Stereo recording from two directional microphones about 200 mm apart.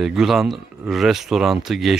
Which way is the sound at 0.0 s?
Centre (ahead or behind).